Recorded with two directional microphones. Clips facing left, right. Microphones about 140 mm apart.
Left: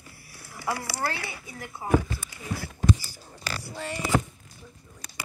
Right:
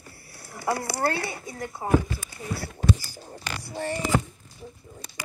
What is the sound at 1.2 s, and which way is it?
Speech, 40° right (ahead or behind).